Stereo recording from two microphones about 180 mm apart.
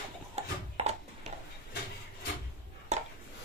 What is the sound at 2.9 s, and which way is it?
Chopping, 40° right (ahead or behind).